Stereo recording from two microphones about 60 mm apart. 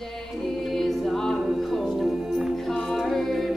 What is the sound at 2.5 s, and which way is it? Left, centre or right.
Music, centre.